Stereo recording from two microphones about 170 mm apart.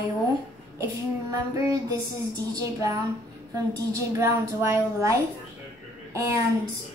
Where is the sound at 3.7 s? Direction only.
20° right (ahead or behind).